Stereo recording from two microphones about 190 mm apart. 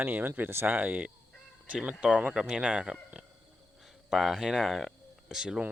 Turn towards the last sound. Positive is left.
turn(degrees=-5)  # may be behind; listen again after turning